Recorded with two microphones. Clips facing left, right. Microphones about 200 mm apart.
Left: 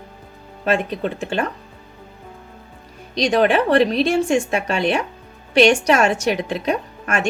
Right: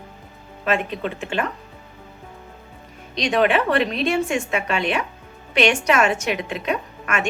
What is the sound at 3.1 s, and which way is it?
A woman's voice, 35° left (ahead or behind).